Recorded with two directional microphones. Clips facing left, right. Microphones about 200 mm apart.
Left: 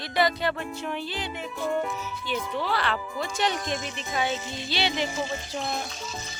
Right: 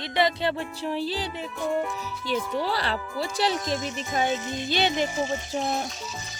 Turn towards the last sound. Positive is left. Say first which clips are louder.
# right 4 dB
turn(degrees=-40)  # may be behind; listen again after turning